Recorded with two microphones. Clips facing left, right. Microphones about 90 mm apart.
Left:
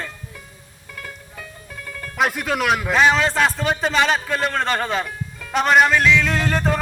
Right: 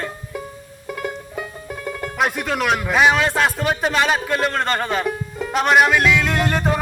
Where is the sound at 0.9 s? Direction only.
20° right (ahead or behind).